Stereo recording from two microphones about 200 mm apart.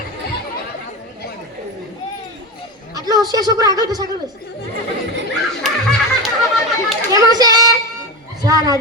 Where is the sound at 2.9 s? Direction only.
20° right (ahead or behind).